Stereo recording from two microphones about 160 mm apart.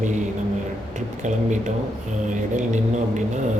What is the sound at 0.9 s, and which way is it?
Speech, 50° right (ahead or behind).